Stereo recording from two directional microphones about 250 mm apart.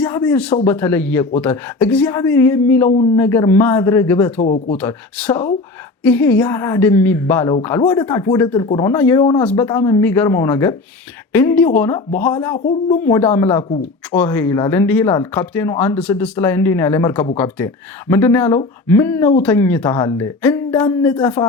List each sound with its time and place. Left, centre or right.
0.0 s speech: centre
4.4 s speech: left
4.8 s speech: centre
12.5 s speech: left
13.0 s speech: centre